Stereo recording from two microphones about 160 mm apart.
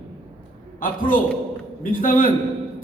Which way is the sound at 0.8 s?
60° left (ahead or behind).